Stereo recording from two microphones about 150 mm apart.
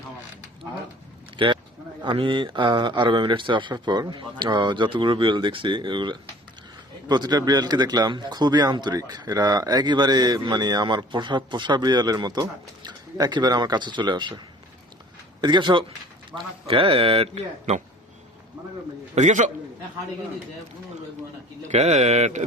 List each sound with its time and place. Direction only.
1.4 s speech: 35° right (ahead or behind)
16.3 s a man's voice: 5° right (ahead or behind)
16.6 s speech: 35° right (ahead or behind)
19.1 s speech: 55° right (ahead or behind)
21.7 s speech: 50° right (ahead or behind)